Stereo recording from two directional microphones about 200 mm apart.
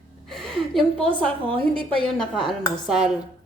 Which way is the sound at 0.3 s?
Centre (ahead or behind).